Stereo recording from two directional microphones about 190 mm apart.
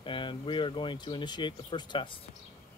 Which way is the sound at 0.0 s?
25° left (ahead or behind).